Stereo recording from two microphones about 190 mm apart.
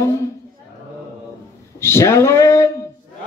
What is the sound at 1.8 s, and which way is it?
Speech, 15° left (ahead or behind).